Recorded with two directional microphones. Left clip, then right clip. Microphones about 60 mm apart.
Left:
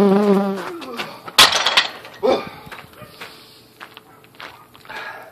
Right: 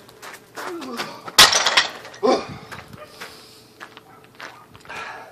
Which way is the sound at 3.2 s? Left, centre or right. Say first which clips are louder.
Left 2 dB; left.